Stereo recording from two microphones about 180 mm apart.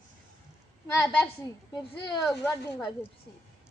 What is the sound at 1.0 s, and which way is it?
Speech, 15° left (ahead or behind).